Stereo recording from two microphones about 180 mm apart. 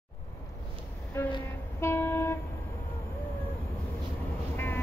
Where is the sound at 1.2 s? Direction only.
15° left (ahead or behind).